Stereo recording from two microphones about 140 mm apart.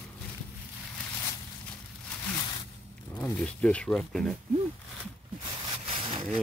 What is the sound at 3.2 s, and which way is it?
Speech, 10° left (ahead or behind).